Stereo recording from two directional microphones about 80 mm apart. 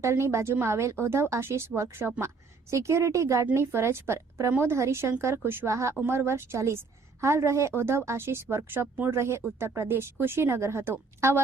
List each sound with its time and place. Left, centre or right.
0.0 s speech: right